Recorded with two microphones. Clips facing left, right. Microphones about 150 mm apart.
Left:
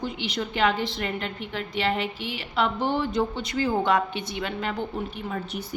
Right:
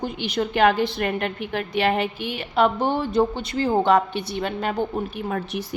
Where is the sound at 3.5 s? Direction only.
30° right (ahead or behind).